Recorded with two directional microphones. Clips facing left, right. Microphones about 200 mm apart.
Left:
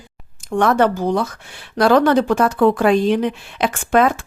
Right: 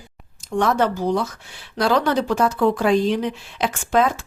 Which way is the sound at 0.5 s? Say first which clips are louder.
Left 4 dB; 60° left (ahead or behind).